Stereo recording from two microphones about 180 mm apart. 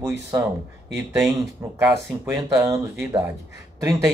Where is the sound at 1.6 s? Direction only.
15° right (ahead or behind).